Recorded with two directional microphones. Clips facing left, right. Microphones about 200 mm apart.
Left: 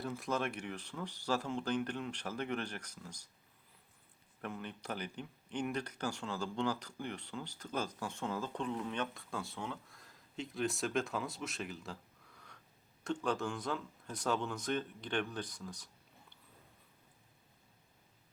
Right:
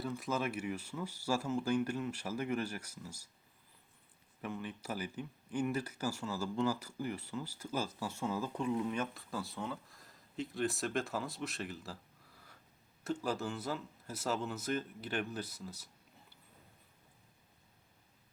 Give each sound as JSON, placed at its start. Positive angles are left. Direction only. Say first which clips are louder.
{"t": 0.0, "sound": "speech", "louder": "even", "side_deg": 0}
{"t": 4.4, "sound": "speech", "louder": "right 2 dB", "side_deg": 0}
{"t": 13.1, "sound": "speech", "louder": "left 1 dB", "side_deg": -5}